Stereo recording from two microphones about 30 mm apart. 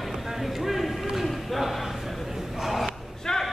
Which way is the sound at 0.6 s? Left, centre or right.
Centre.